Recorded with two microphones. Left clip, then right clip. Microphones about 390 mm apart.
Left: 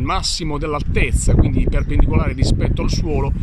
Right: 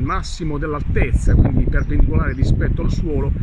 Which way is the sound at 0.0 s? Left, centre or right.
Centre.